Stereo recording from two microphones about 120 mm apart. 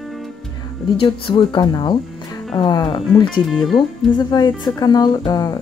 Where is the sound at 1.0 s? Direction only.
45° left (ahead or behind).